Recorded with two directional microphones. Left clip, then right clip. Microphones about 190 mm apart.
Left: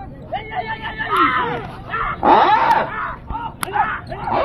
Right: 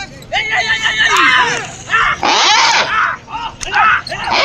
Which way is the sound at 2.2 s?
15° left (ahead or behind).